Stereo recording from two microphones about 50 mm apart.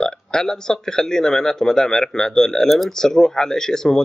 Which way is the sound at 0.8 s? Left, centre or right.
Centre.